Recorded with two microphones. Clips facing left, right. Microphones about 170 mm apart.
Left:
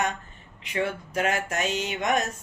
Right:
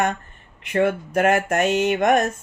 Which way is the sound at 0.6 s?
55° right (ahead or behind).